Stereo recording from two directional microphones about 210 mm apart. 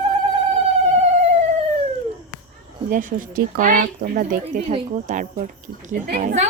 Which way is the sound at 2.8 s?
40° right (ahead or behind).